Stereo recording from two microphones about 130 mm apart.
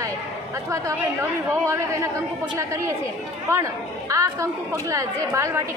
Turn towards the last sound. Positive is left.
turn(degrees=-25)  # may be behind; listen again after turning